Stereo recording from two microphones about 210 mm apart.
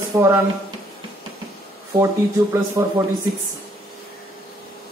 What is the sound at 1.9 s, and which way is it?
Speech, 15° right (ahead or behind).